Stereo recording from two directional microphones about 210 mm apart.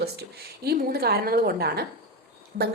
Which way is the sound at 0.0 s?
50° right (ahead or behind).